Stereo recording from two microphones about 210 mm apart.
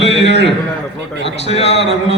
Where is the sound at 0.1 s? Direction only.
55° left (ahead or behind).